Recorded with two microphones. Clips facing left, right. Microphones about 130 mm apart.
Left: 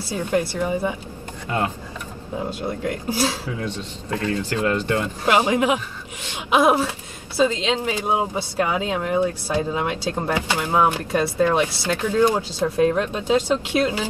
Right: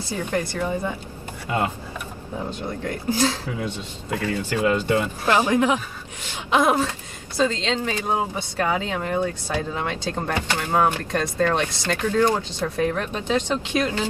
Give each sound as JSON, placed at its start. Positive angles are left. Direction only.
{"t": 0.1, "sound": "speech", "side_deg": 10}
{"t": 2.8, "sound": "speech", "side_deg": 10}
{"t": 3.6, "sound": "speech", "side_deg": -10}
{"t": 5.2, "sound": "speech", "side_deg": 15}
{"t": 12.8, "sound": "speech", "side_deg": 20}
{"t": 13.4, "sound": "speech", "side_deg": 10}